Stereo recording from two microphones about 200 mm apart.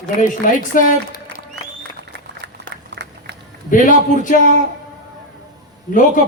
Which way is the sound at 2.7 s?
55° right (ahead or behind).